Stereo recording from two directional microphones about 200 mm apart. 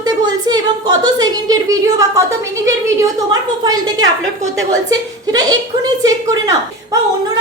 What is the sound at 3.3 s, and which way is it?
Speech, 20° right (ahead or behind).